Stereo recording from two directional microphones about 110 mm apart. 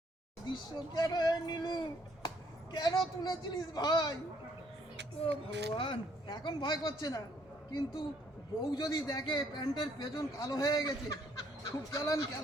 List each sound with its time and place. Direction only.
0.4 s a man's voice: 40° left (ahead or behind)
5.7 s a man's voice: 50° left (ahead or behind); by 12.4 s 30° left (ahead or behind)